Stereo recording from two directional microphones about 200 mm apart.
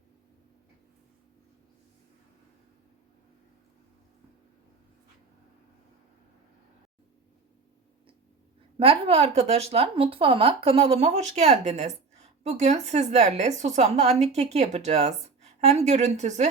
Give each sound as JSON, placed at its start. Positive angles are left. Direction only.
{"t": 8.8, "sound": "speech", "side_deg": -30}